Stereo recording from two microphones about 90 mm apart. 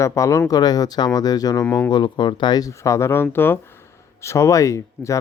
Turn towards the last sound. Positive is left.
turn(degrees=35)  # may be behind; listen again after turning